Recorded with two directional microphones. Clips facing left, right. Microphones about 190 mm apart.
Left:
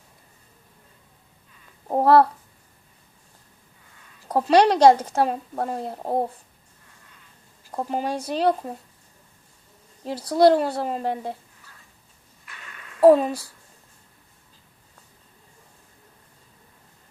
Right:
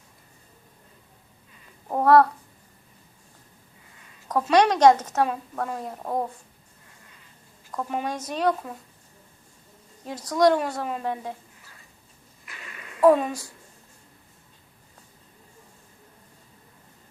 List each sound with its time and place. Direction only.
1.9 s speech: 30° left (ahead or behind)
4.3 s speech: 30° left (ahead or behind)
7.7 s speech: 30° left (ahead or behind)
10.0 s speech: 30° left (ahead or behind)
12.5 s a sound: 5° right (ahead or behind)
13.0 s speech: 35° left (ahead or behind)